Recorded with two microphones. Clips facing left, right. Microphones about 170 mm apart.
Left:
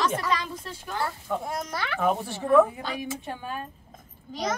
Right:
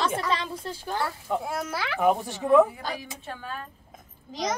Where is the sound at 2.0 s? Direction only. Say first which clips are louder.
Right 3 dB; 15° right (ahead or behind).